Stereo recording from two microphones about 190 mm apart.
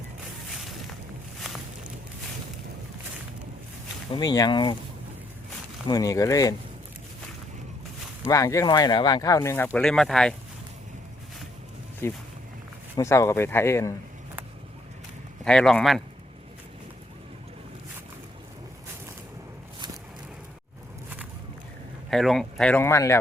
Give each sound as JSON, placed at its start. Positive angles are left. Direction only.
{"t": 4.1, "sound": "speech", "side_deg": 20}
{"t": 5.9, "sound": "speech", "side_deg": 20}
{"t": 8.3, "sound": "speech", "side_deg": 15}
{"t": 12.0, "sound": "speech", "side_deg": 15}
{"t": 15.4, "sound": "speech", "side_deg": 5}
{"t": 22.1, "sound": "speech", "side_deg": 0}